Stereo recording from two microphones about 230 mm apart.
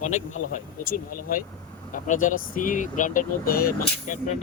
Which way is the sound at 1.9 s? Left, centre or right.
Left.